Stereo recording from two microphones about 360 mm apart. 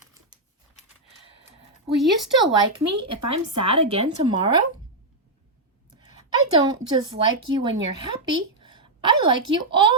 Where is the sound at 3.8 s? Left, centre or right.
Centre.